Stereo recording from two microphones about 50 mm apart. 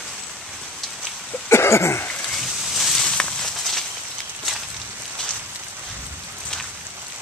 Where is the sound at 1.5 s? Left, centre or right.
Left.